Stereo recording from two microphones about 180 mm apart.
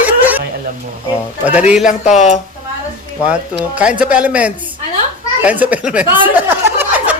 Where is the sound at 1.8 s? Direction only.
45° left (ahead or behind).